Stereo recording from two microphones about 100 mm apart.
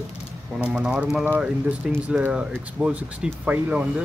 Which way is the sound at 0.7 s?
10° right (ahead or behind).